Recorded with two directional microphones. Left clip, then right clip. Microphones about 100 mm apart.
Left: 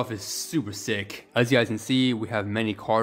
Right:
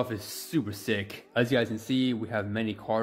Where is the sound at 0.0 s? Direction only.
10° left (ahead or behind).